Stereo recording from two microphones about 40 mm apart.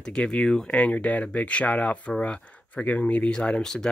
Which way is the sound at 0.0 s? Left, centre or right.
Left.